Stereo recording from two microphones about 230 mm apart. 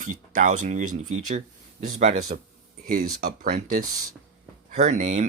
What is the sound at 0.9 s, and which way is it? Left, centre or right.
Speech, right.